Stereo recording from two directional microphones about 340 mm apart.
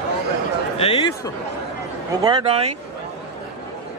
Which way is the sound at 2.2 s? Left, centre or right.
Centre.